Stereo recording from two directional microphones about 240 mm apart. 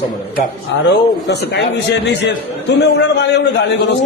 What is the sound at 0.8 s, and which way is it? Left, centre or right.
A man's voice, left.